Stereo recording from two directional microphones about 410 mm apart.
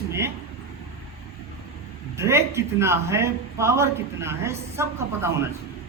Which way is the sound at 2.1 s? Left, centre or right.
Centre.